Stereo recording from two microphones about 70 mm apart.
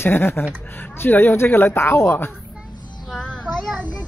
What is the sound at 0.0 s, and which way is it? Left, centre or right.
Speech, left.